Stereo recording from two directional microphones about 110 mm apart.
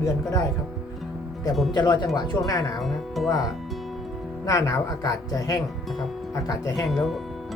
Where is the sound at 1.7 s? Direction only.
40° left (ahead or behind).